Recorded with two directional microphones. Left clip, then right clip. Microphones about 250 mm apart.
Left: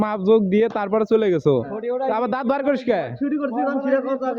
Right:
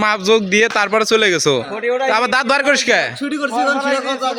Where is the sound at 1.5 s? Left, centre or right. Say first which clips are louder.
Right 4 dB; right.